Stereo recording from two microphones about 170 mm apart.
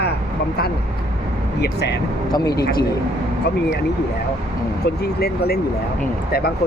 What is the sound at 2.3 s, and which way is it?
Speech, 25° left (ahead or behind).